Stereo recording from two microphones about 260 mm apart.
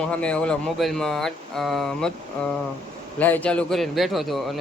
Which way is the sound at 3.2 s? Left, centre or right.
Centre.